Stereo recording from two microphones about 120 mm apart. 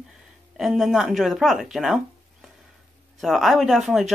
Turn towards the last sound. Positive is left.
turn(degrees=0)  # may be behind; listen again after turning